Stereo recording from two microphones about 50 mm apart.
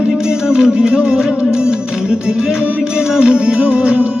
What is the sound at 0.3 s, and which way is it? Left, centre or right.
Music, centre.